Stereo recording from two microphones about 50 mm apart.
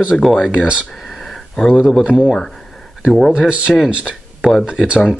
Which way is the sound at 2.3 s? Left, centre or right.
Centre.